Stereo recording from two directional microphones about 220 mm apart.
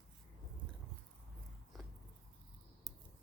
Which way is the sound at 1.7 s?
Centre (ahead or behind).